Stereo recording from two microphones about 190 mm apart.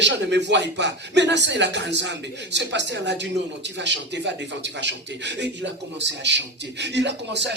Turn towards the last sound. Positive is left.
turn(degrees=-65)  # may be behind; listen again after turning